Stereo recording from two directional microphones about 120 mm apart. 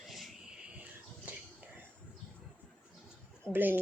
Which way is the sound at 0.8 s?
10° right (ahead or behind).